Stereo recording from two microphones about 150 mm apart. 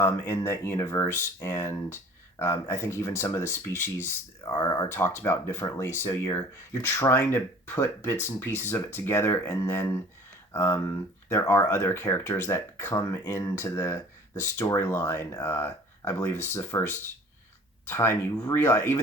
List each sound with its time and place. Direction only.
0.0 s speech: 15° left (ahead or behind)
17.8 s speech: 15° left (ahead or behind)